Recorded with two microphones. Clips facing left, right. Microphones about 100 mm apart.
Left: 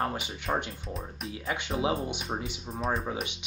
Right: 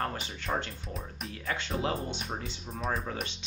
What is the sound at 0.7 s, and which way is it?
Speech, centre (ahead or behind).